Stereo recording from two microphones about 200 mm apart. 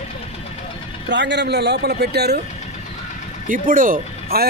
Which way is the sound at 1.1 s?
60° right (ahead or behind).